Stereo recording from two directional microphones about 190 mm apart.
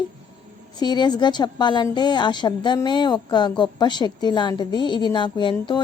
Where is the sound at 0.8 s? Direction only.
20° left (ahead or behind).